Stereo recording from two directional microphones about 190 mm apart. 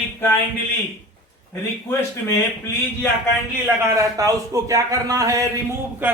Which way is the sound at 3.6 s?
15° right (ahead or behind).